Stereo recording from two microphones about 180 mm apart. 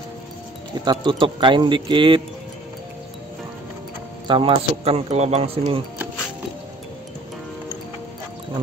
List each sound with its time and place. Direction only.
0.7 s speech: 25° right (ahead or behind)
4.3 s a man's voice: 30° right (ahead or behind)